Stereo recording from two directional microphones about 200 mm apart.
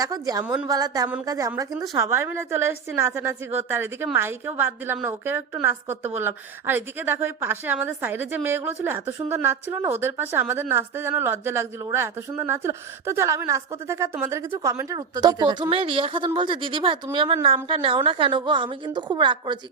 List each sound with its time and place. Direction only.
0.0 s a woman's voice: 20° right (ahead or behind)
0.4 s a woman's voice: 5° right (ahead or behind)
0.7 s a woman's voice: 20° right (ahead or behind)